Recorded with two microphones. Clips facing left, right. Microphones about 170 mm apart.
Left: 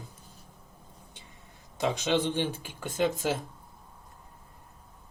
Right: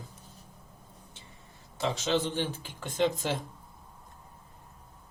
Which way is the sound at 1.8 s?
15° left (ahead or behind).